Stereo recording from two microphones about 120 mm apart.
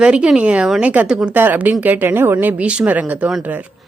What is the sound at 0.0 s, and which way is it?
Speech, 10° right (ahead or behind).